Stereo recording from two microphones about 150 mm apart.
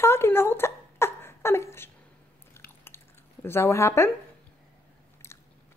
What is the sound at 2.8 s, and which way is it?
Drip, 15° left (ahead or behind).